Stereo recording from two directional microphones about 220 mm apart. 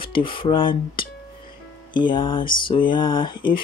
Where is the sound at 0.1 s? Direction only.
25° left (ahead or behind).